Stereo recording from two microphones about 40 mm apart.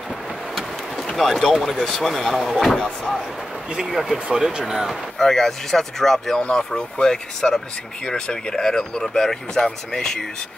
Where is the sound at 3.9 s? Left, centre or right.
Centre.